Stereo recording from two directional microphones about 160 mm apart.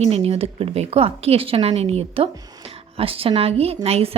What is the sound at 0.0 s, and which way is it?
A woman's voice, 40° right (ahead or behind).